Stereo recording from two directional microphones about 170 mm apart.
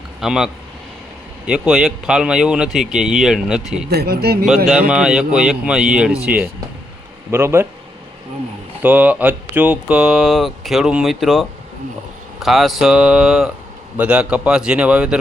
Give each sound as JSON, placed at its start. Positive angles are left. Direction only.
{"t": 0.2, "sound": "speech", "side_deg": -5}
{"t": 3.8, "sound": "speech", "side_deg": -65}
{"t": 4.4, "sound": "speech", "side_deg": 0}
{"t": 7.3, "sound": "speech", "side_deg": -15}
{"t": 8.8, "sound": "speech", "side_deg": -10}